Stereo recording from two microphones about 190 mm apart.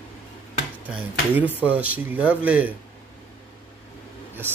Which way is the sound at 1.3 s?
10° right (ahead or behind).